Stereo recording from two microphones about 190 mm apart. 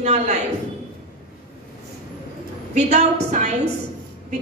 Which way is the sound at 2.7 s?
35° right (ahead or behind).